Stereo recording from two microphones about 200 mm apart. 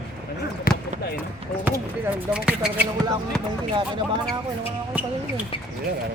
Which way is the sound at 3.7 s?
25° right (ahead or behind).